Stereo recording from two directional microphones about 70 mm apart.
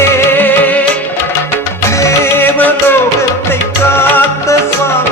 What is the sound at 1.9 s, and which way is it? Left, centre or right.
Music, left.